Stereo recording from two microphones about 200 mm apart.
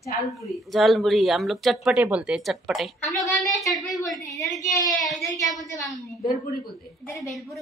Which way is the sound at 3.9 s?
20° left (ahead or behind).